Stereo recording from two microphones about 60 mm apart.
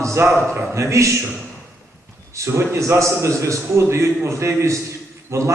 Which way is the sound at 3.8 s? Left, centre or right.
Right.